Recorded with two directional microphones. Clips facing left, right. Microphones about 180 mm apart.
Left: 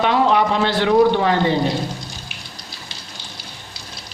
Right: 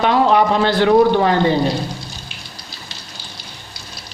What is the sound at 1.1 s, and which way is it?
Speech, 40° right (ahead or behind).